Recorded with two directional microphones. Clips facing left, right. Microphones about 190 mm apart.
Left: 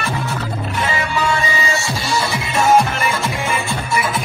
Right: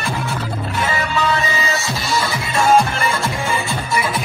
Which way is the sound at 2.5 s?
5° left (ahead or behind).